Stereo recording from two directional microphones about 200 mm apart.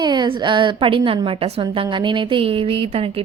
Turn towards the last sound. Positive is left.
turn(degrees=-30)  # may be behind; listen again after turning